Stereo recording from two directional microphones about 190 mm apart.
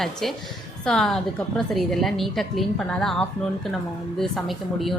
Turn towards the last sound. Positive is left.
turn(degrees=0)  # may be behind; listen again after turning